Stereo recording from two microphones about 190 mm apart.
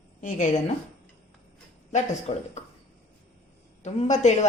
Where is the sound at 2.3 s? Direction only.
30° left (ahead or behind).